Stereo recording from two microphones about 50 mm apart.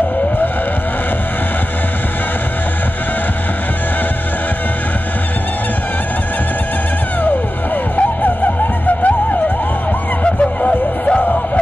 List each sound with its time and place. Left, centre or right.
7.2 s music: left
10.2 s music: left